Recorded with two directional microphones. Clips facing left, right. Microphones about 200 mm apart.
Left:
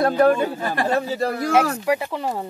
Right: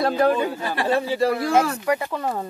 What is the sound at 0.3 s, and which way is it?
A man's voice, 45° left (ahead or behind).